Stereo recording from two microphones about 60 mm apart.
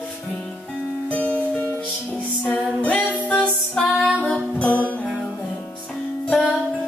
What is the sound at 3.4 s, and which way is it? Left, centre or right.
Music, centre.